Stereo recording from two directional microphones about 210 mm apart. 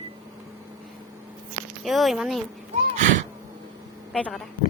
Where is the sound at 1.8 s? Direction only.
Centre (ahead or behind).